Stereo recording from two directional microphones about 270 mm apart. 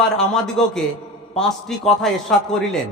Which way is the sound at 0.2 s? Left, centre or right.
Centre.